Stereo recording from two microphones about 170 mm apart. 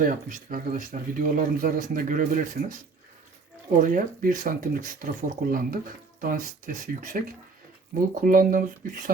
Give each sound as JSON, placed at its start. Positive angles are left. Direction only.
{"t": 0.0, "sound": "speech", "side_deg": -50}
{"t": 3.8, "sound": "speech", "side_deg": -55}